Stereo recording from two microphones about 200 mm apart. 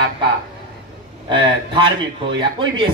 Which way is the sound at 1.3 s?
25° right (ahead or behind).